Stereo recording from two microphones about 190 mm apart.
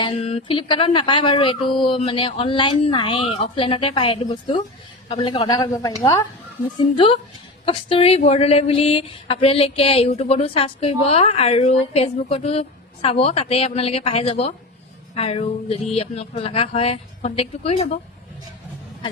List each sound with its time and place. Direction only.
0.0 s speech: 30° left (ahead or behind)